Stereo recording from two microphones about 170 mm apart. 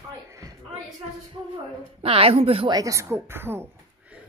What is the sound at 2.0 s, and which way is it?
Speech, 35° right (ahead or behind).